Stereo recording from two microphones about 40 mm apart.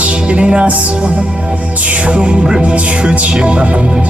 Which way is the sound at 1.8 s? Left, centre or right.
Right.